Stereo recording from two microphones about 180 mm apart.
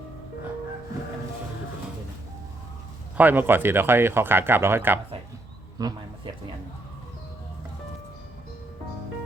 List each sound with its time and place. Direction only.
3.2 s speech: 10° right (ahead or behind)